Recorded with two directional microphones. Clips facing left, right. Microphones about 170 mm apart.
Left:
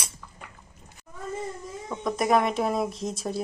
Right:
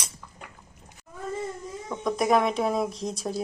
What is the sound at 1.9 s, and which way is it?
Speech, centre (ahead or behind).